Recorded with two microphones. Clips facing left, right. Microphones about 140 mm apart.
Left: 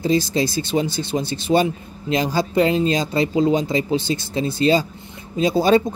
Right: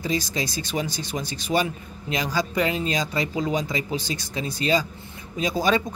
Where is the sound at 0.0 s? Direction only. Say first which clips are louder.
Left 8 dB; 30° left (ahead or behind).